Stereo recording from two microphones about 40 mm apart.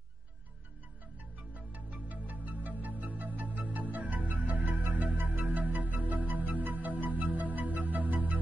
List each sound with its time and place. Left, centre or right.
1.5 s music: right